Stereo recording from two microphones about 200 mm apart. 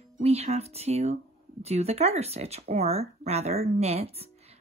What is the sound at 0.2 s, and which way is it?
Speech, 35° right (ahead or behind).